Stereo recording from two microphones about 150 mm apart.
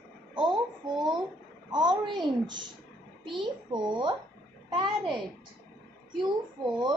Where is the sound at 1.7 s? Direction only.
30° right (ahead or behind).